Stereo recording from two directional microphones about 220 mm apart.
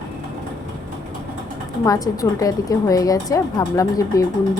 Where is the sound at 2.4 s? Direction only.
15° left (ahead or behind).